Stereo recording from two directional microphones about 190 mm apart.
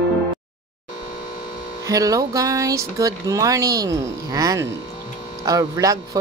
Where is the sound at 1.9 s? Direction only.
20° right (ahead or behind).